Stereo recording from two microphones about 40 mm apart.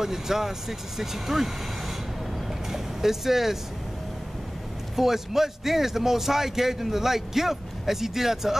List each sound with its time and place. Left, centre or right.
0.0 s speech: centre
4.9 s speech: centre